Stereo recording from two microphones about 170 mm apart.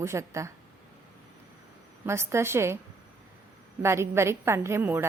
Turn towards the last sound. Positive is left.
turn(degrees=-15)  # may be behind; listen again after turning